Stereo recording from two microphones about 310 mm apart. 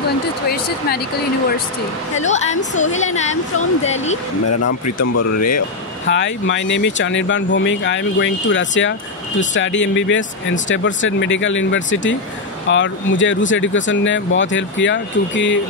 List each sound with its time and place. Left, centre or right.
0.5 s speech: left
2.1 s a woman's voice: left
4.5 s speech: left
6.0 s speech: left